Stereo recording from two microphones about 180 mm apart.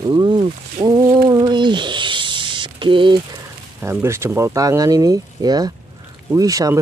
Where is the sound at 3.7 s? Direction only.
15° right (ahead or behind).